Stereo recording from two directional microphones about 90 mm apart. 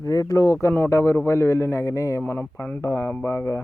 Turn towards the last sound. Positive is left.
turn(degrees=30)  # may be behind; listen again after turning